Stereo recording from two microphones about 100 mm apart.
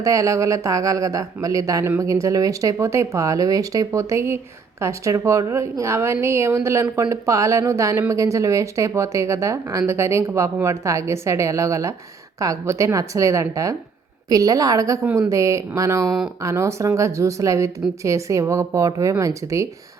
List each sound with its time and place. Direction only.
0.0 s a woman's voice: 35° right (ahead or behind)
15.0 s speech: 15° right (ahead or behind)
15.3 s a woman's voice: 30° right (ahead or behind)